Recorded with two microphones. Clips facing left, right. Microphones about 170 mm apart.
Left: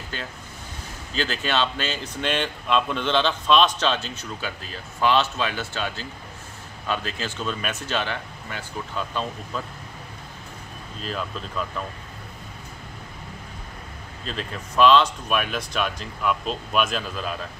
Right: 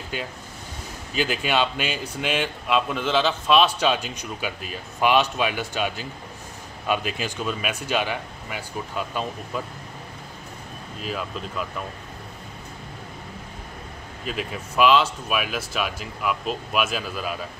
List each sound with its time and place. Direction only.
0.1 s speech: 10° right (ahead or behind)
11.0 s speech: 5° right (ahead or behind)
14.2 s speech: 10° right (ahead or behind)